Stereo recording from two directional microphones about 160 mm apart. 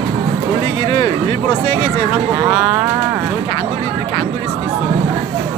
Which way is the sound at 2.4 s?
5° right (ahead or behind).